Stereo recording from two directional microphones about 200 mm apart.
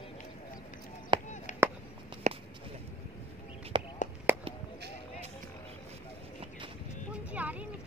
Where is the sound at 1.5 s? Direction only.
35° left (ahead or behind).